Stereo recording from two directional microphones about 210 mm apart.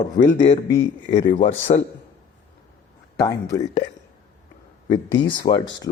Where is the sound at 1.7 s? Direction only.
35° left (ahead or behind).